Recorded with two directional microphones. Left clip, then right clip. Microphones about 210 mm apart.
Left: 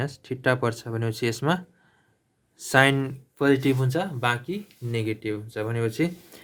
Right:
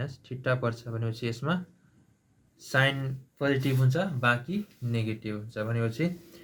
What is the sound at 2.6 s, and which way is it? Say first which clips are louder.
Speech: left 7 dB; 50° left (ahead or behind).